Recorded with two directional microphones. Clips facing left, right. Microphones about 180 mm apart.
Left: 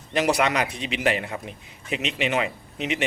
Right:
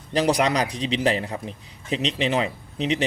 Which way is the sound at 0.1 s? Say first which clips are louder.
Right 1 dB; 35° right (ahead or behind).